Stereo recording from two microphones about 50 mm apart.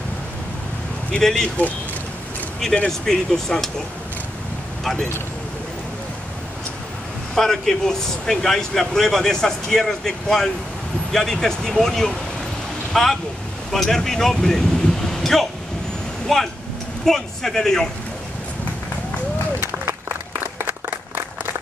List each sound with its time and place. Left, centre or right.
1.2 s speech: centre
2.9 s speech: centre
7.3 s speech: centre
19.6 s applause: right